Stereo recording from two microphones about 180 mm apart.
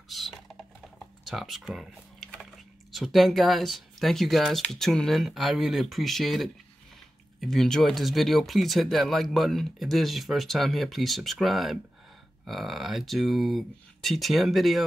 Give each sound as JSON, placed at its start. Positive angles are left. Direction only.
{"t": 0.1, "sound": "typing", "side_deg": 0}
{"t": 2.9, "sound": "speech", "side_deg": 0}